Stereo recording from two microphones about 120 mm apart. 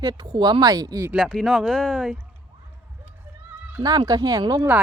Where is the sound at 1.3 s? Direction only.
Centre (ahead or behind).